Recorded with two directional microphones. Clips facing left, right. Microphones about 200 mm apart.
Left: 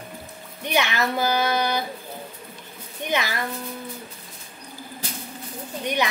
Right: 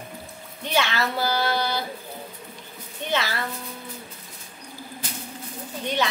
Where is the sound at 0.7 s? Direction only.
15° left (ahead or behind).